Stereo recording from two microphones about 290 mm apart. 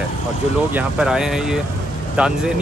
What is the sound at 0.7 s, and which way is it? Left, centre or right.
Speech, centre.